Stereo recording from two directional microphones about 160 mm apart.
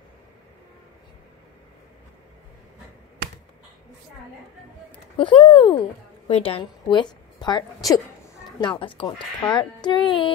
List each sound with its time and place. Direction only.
5.1 s a woman's voice: 35° left (ahead or behind)